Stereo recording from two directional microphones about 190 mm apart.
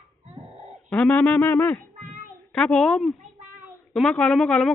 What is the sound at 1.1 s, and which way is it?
Speech, 15° left (ahead or behind).